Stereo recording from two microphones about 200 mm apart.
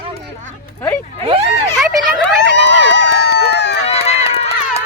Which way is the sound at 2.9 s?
60° left (ahead or behind).